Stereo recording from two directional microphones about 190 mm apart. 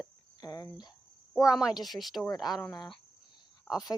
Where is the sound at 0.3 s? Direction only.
20° left (ahead or behind).